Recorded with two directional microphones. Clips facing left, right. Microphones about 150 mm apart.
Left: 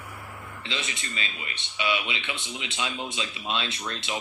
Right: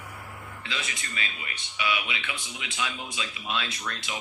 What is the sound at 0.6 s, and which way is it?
Speech, 25° left (ahead or behind).